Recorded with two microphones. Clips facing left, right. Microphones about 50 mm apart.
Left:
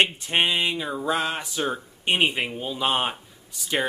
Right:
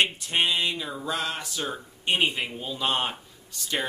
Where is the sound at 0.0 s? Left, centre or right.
Left.